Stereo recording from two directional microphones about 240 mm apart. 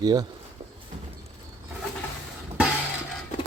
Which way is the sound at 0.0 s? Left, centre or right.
Centre.